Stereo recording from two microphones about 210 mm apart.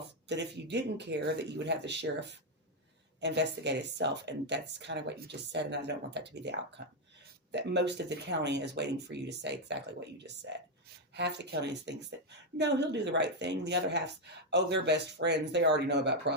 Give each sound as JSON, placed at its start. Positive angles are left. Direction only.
{"t": 0.3, "sound": "speech", "side_deg": -55}